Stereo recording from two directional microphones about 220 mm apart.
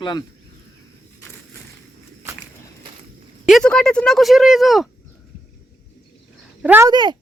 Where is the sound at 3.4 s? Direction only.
Centre (ahead or behind).